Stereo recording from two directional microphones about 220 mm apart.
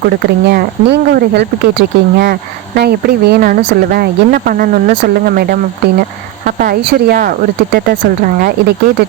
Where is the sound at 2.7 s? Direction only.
45° right (ahead or behind).